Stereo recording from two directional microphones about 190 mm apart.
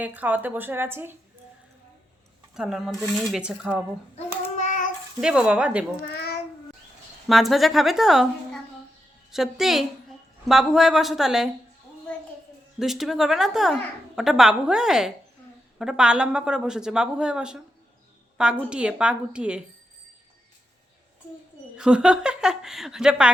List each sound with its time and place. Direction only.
0.0 s speech: 10° right (ahead or behind)
2.6 s a woman's voice: 5° right (ahead or behind)
4.5 s child singing: 40° left (ahead or behind)
5.2 s a woman's voice: 5° right (ahead or behind)
6.1 s child singing: 55° left (ahead or behind)
7.3 s a woman's voice: centre (ahead or behind)
12.8 s a woman's voice: centre (ahead or behind)
18.7 s a woman's voice: 5° right (ahead or behind)
21.8 s a woman's voice: 5° right (ahead or behind)